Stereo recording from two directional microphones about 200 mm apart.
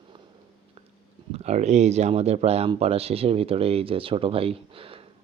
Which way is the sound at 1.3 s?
35° right (ahead or behind).